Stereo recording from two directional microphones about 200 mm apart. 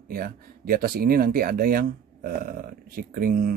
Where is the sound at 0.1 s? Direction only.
45° right (ahead or behind).